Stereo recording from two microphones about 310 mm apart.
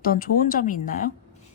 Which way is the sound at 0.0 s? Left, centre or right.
Left.